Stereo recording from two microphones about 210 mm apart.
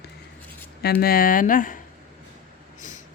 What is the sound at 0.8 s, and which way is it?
Speech, 45° left (ahead or behind).